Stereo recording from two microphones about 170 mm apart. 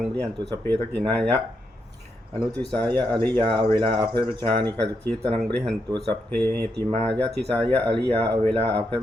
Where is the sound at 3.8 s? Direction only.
25° right (ahead or behind).